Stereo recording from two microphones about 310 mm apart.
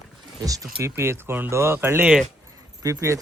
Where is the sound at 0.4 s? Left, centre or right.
Centre.